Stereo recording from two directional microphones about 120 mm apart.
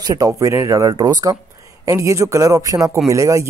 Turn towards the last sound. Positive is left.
turn(degrees=-25)  # may be behind; listen again after turning